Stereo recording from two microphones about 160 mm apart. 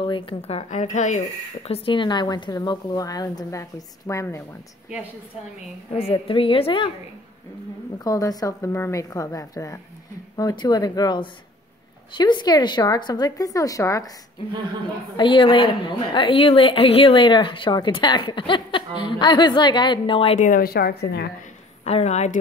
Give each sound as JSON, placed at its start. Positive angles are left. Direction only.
{"t": 0.0, "sound": "a woman's voice", "side_deg": 35}
{"t": 1.7, "sound": "a woman's voice", "side_deg": 30}
{"t": 6.1, "sound": "a woman's voice", "side_deg": 35}
{"t": 8.0, "sound": "a woman's voice", "side_deg": 20}
{"t": 15.1, "sound": "a woman's voice", "side_deg": 30}
{"t": 21.8, "sound": "a woman's voice", "side_deg": 45}